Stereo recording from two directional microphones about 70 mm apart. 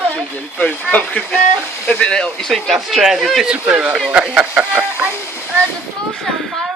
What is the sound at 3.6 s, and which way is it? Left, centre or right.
Speech, centre.